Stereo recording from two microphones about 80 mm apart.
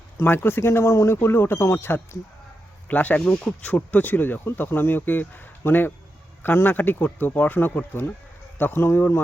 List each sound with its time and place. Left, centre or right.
0.2 s speech: left